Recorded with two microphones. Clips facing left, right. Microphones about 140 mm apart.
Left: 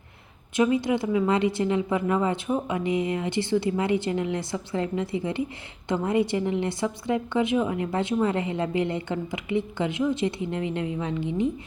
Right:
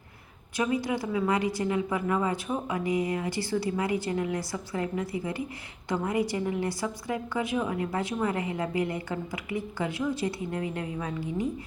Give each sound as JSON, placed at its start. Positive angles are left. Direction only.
{"t": 0.5, "sound": "a woman's voice", "side_deg": 25}